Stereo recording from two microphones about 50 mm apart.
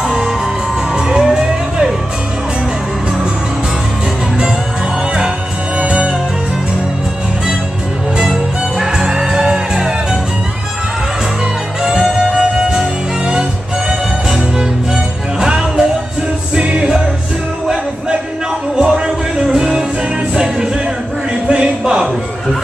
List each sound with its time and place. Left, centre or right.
0.0 s music: centre
5.8 s music: right
8.2 s music: centre
11.8 s music: centre
18.8 s music: centre
21.5 s a sound: centre